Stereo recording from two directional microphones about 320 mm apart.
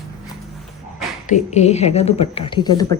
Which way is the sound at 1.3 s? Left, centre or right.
Left.